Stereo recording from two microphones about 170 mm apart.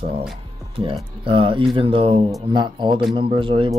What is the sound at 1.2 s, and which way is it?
Speech, 30° right (ahead or behind).